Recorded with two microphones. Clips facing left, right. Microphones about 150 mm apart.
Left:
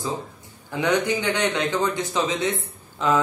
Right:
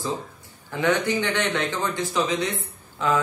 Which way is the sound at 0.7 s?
15° left (ahead or behind).